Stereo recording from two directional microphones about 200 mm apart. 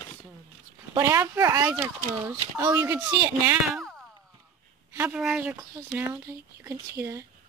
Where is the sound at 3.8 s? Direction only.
Centre (ahead or behind).